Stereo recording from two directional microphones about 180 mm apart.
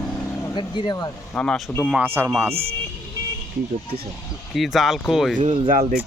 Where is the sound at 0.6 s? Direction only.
25° left (ahead or behind).